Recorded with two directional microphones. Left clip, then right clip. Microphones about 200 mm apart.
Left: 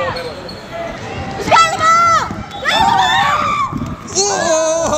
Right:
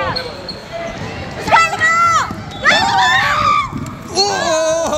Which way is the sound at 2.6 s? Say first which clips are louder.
Even; 40° left (ahead or behind).